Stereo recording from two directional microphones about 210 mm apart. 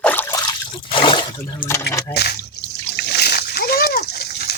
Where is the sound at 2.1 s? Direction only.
50° left (ahead or behind).